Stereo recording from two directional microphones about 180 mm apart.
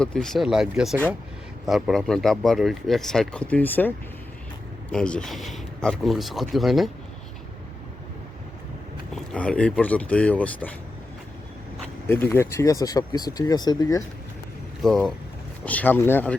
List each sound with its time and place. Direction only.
0.0 s speech: 5° left (ahead or behind)
9.3 s speech: 5° left (ahead or behind)
12.0 s speech: 10° left (ahead or behind)
14.8 s speech: centre (ahead or behind)